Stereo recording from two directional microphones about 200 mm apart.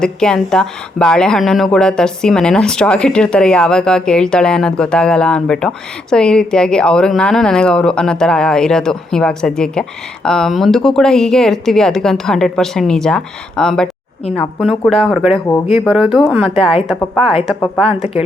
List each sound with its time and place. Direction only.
0.0 s speech: 5° left (ahead or behind)
17.8 s speech: 30° left (ahead or behind)